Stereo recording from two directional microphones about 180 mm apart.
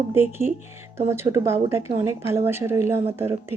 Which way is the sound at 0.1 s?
15° right (ahead or behind).